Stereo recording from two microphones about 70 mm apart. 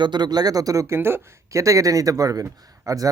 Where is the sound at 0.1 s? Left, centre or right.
Right.